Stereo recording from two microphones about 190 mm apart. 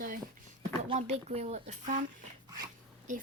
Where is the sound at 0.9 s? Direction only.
35° right (ahead or behind).